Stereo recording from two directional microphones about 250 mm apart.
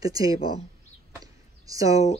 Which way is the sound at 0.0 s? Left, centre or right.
Centre.